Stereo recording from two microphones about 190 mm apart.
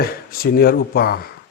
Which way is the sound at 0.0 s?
50° left (ahead or behind).